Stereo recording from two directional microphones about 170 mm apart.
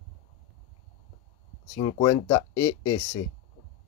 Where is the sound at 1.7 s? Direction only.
25° left (ahead or behind).